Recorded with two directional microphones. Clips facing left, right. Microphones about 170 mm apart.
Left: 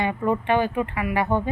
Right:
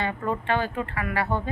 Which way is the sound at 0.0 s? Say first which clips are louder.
Left 5 dB; 15° left (ahead or behind).